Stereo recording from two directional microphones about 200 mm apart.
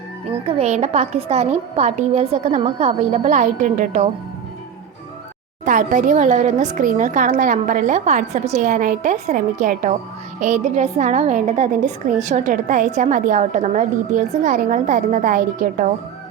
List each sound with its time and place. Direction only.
0.4 s a woman's voice: 30° right (ahead or behind)
5.6 s a woman's voice: 40° right (ahead or behind)